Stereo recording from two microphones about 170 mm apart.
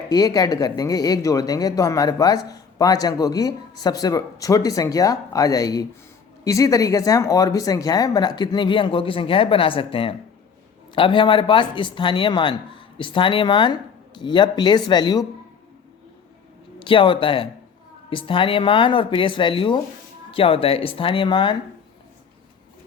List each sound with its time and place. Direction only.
0.1 s speech: 20° left (ahead or behind)
16.8 s speech: 30° left (ahead or behind)